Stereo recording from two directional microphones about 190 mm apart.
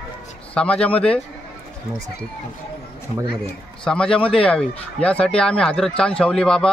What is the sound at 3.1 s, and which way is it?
Speech, 30° left (ahead or behind).